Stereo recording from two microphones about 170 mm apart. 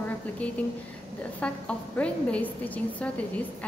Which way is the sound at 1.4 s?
5° left (ahead or behind).